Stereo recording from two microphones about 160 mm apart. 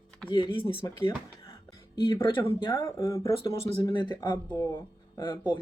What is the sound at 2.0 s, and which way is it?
Speech, 30° left (ahead or behind).